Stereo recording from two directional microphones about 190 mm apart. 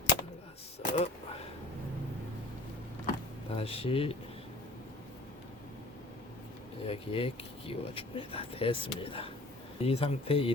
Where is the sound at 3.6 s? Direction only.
30° left (ahead or behind).